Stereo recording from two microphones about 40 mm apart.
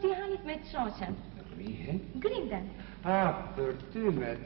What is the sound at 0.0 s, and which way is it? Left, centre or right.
Music, centre.